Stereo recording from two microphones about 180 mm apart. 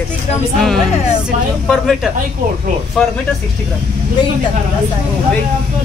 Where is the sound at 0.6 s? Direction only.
Centre (ahead or behind).